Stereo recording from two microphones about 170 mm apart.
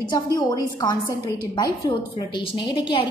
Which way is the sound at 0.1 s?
25° left (ahead or behind).